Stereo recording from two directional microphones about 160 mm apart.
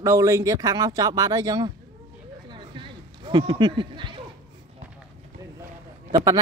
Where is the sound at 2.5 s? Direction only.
30° right (ahead or behind).